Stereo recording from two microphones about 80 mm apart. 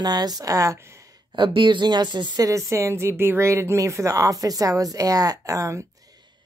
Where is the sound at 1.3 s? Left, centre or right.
Right.